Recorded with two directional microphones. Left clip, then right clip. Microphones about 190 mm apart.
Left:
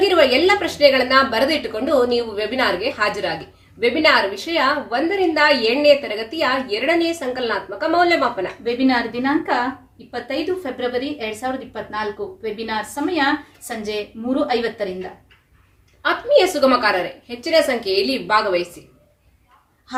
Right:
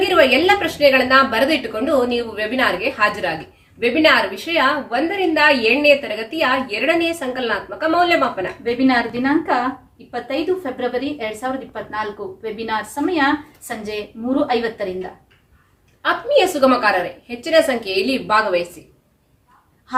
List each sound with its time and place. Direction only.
0.1 s a woman's voice: 15° right (ahead or behind)
8.9 s a woman's voice: 10° left (ahead or behind)
16.0 s a woman's voice: 15° right (ahead or behind)